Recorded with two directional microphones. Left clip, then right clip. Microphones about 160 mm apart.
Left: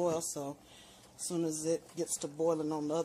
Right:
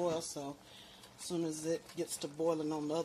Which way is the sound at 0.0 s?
15° left (ahead or behind).